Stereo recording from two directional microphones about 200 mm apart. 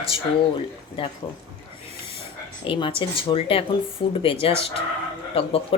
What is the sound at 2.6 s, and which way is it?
Speech, 25° left (ahead or behind).